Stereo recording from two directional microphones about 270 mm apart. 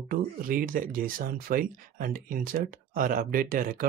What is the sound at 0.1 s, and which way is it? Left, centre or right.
Speech, right.